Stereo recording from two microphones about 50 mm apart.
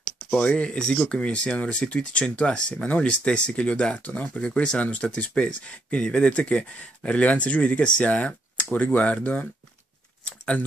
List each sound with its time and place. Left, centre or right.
0.3 s speech: left